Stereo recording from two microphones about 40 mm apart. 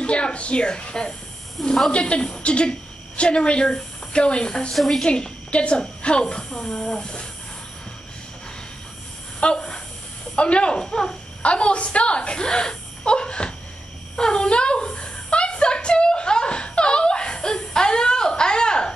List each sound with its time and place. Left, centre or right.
0.0 s speech: left
4.7 s a woman's voice: centre
5.0 s a woman's voice: left
6.5 s speech: centre
9.4 s a sound: left
10.3 s speech: left
11.4 s speech: left
14.1 s a sound: centre